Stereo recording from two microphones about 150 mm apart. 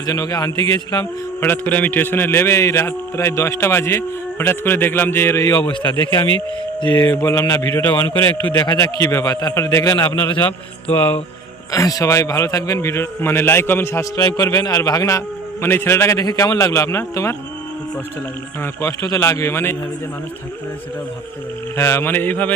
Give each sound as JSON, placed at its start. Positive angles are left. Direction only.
{"t": 0.0, "sound": "a man's voice", "side_deg": 25}
{"t": 6.0, "sound": "speech", "side_deg": -35}
{"t": 7.1, "sound": "a man's voice", "side_deg": 20}
{"t": 8.6, "sound": "a man's voice", "side_deg": 30}
{"t": 9.0, "sound": "a man's voice", "side_deg": 20}
{"t": 11.7, "sound": "a man's voice", "side_deg": 20}
{"t": 18.6, "sound": "a man's voice", "side_deg": 20}
{"t": 21.8, "sound": "a man's voice", "side_deg": 20}